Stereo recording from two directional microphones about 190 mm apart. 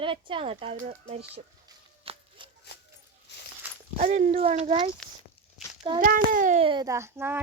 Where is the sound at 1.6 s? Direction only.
25° right (ahead or behind).